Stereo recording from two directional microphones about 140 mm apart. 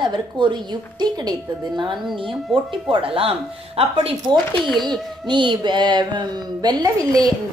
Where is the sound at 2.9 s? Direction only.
40° right (ahead or behind).